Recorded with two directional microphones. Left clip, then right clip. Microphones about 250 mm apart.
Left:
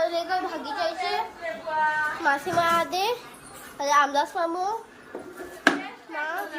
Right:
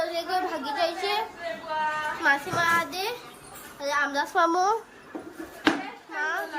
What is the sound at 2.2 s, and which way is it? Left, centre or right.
A woman's voice, centre.